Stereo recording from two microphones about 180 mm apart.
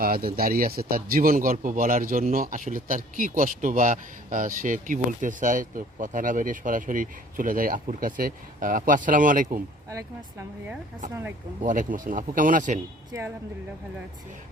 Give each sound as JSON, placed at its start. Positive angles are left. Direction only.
{"t": 0.0, "sound": "speech", "side_deg": -55}
{"t": 9.9, "sound": "speech", "side_deg": -15}
{"t": 11.6, "sound": "speech", "side_deg": -45}
{"t": 13.1, "sound": "speech", "side_deg": -15}